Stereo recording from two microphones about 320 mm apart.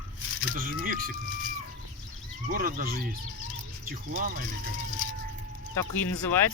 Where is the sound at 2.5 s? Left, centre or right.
Right.